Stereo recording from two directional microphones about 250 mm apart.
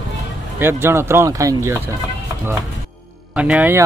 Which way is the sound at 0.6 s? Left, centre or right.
Centre.